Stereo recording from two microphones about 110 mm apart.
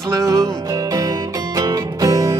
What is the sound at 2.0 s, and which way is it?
Music, 35° right (ahead or behind).